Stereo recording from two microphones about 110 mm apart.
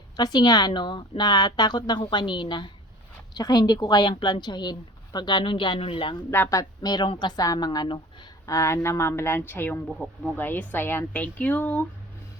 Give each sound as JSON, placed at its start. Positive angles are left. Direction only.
{"t": 0.2, "sound": "a woman's voice", "side_deg": 35}
{"t": 6.3, "sound": "speech", "side_deg": 20}
{"t": 6.6, "sound": "a woman's voice", "side_deg": 40}
{"t": 8.4, "sound": "speech", "side_deg": 25}
{"t": 9.8, "sound": "speech", "side_deg": 5}
{"t": 10.3, "sound": "speech", "side_deg": 15}